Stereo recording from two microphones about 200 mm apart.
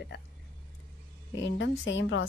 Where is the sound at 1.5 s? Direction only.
65° left (ahead or behind).